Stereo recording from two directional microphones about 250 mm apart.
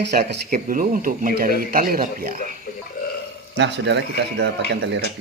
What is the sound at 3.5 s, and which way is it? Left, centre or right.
Speech, right.